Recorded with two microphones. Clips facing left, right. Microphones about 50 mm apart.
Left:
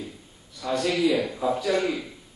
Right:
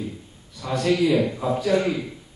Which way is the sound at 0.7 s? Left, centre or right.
Right.